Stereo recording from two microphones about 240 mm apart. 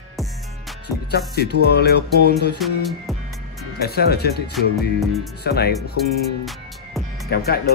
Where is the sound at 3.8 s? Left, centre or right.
Left.